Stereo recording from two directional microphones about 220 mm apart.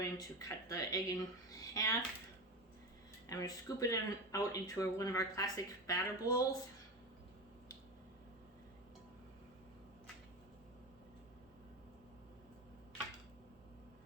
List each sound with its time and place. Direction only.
0.0 s speech: 15° left (ahead or behind)
3.2 s speech: 15° left (ahead or behind)